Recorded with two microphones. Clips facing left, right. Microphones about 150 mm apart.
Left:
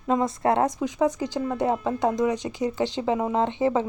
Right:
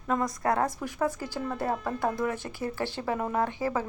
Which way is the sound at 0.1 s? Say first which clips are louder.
Left 5 dB; 25° left (ahead or behind).